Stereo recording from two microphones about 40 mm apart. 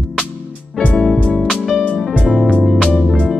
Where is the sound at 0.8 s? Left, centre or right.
Left.